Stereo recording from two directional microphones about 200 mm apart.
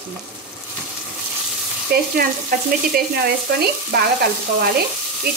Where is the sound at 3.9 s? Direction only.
55° right (ahead or behind).